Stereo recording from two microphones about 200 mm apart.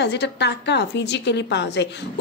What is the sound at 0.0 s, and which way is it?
A woman's voice, 60° left (ahead or behind).